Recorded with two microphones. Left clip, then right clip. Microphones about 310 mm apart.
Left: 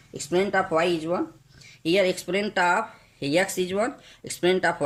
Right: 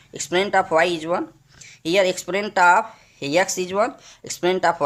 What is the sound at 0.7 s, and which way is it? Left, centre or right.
Speech, right.